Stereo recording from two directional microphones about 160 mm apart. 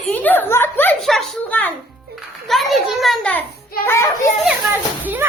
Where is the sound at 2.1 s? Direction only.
Centre (ahead or behind).